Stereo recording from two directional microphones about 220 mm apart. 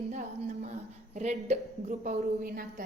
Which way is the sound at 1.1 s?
30° right (ahead or behind).